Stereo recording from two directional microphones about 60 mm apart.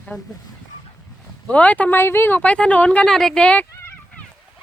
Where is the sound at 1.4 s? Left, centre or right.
Left.